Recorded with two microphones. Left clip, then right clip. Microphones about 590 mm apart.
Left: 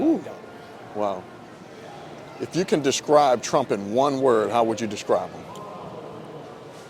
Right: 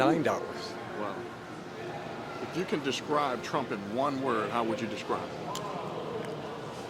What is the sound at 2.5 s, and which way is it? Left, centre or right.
Speech, left.